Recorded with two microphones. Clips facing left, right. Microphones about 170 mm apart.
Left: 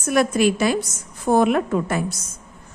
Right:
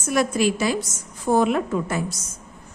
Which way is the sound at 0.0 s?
60° left (ahead or behind).